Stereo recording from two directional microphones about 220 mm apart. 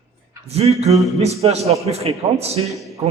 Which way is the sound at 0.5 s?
30° right (ahead or behind).